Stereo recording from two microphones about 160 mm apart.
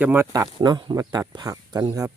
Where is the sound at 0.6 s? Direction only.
25° right (ahead or behind).